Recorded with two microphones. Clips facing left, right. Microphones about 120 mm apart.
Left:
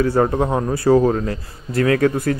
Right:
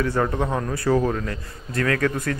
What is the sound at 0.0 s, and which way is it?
A man's voice, 35° left (ahead or behind).